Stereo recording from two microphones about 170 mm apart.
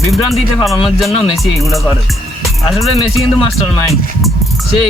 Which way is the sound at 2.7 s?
Centre (ahead or behind).